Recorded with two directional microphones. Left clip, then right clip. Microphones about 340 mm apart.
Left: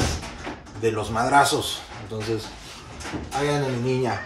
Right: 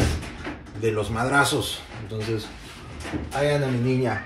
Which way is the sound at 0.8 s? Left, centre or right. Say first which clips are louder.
Left 1 dB; centre.